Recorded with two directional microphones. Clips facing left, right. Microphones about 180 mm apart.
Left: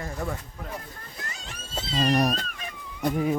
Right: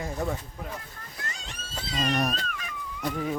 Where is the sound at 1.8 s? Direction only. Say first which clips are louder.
Left 4 dB; 30° left (ahead or behind).